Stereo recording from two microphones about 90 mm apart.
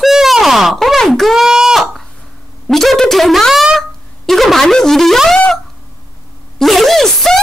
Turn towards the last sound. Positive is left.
turn(degrees=0)  # may be behind; listen again after turning